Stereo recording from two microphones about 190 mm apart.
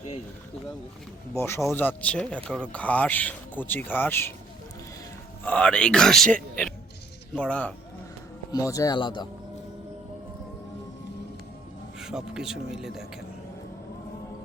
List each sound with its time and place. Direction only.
1.4 s speech: 15° left (ahead or behind)
5.5 s speech: 5° left (ahead or behind)
8.5 s speech: 15° left (ahead or behind)
11.9 s speech: 5° right (ahead or behind)